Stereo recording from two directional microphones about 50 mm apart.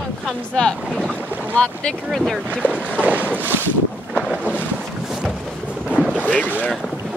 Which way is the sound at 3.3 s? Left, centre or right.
Right.